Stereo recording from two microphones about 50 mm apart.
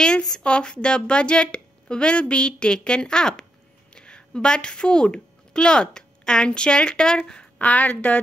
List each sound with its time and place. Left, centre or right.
0.0 s a woman's voice: centre